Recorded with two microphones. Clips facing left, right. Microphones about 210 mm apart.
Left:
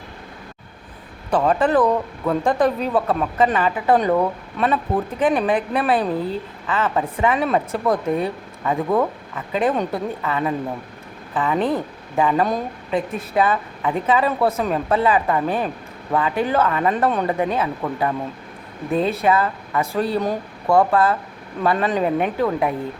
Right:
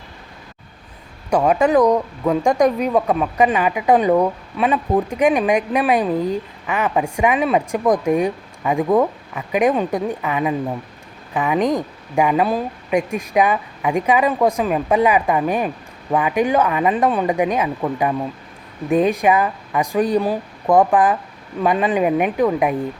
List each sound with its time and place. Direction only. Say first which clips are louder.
1.3 s speech: right 2 dB; 10° right (ahead or behind)